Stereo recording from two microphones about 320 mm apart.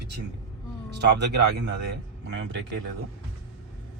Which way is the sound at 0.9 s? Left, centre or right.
Right.